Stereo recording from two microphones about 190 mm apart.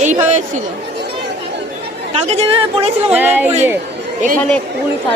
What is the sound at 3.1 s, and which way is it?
Speech, 10° right (ahead or behind).